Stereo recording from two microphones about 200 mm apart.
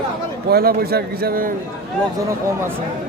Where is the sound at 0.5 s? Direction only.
50° right (ahead or behind).